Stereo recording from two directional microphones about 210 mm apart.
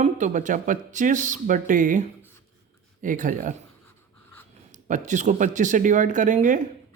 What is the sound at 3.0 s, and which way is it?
Speech, 40° right (ahead or behind).